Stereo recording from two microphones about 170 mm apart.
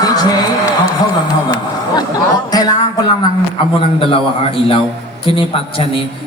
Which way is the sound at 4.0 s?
35° left (ahead or behind).